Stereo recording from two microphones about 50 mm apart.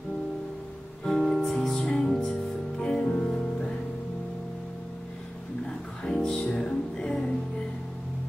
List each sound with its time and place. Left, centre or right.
1.0 s music: centre; by 3.7 s left
6.2 s music: centre